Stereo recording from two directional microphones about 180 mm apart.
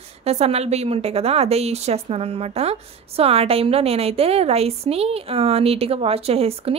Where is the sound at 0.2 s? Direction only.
35° right (ahead or behind).